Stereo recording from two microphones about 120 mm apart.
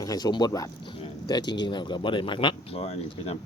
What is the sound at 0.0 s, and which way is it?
Speech, 30° left (ahead or behind).